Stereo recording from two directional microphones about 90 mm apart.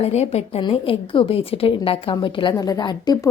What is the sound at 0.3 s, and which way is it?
A woman's voice, 90° left.